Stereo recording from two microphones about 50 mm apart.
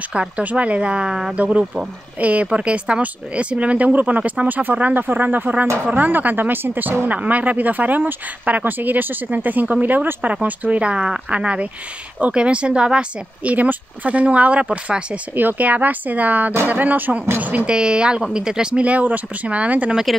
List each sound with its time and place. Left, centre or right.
0.4 s speech: right
1.3 s speech: right
15.3 s speech: right
17.6 s speech: centre